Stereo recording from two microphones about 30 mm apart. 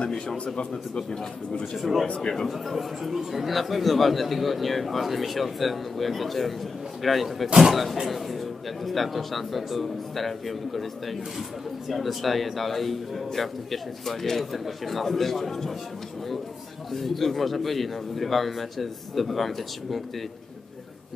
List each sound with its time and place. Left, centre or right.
0.1 s speech: centre
1.8 s speech: centre
2.0 s speech: left
2.4 s speech: centre
16.9 s speech: centre